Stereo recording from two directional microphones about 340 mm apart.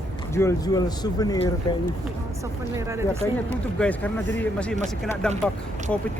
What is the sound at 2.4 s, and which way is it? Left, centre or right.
Speech, centre.